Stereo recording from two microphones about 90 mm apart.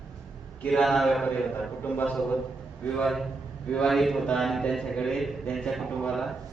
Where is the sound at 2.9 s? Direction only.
Centre (ahead or behind).